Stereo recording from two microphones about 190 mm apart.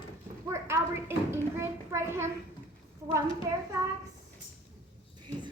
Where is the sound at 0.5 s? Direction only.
15° right (ahead or behind).